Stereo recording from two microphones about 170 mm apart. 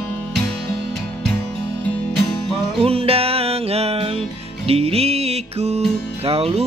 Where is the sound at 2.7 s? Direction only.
35° right (ahead or behind).